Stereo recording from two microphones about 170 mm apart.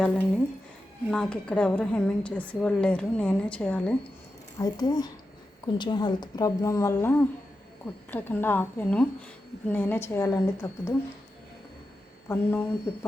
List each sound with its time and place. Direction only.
1.1 s a woman's voice: 5° left (ahead or behind)
4.5 s a woman's voice: 25° left (ahead or behind)
12.3 s a woman's voice: 15° left (ahead or behind)